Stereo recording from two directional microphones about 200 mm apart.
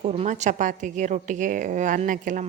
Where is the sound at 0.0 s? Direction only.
30° right (ahead or behind).